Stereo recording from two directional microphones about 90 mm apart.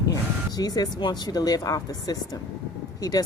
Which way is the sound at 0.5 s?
45° left (ahead or behind).